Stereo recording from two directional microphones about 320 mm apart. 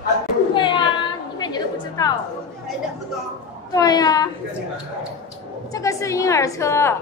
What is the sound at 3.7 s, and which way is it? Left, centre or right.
Speech, centre.